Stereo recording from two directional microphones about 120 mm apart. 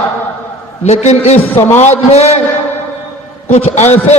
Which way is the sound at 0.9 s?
65° left (ahead or behind).